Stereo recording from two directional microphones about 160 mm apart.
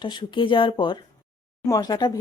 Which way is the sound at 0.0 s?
30° left (ahead or behind).